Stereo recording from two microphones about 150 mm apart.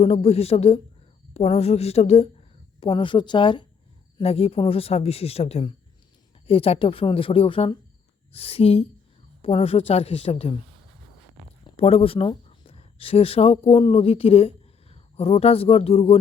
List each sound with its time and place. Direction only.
0.0 s a woman's voice: 40° left (ahead or behind)
2.8 s speech: 35° left (ahead or behind)
11.6 s speech: 40° left (ahead or behind)